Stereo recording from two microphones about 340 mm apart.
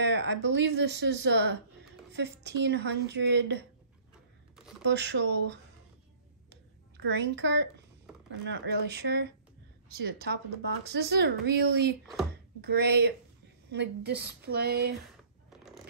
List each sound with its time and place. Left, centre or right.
0.0 s speech: right
4.8 s speech: right
6.5 s a sound: right
8.3 s speech: right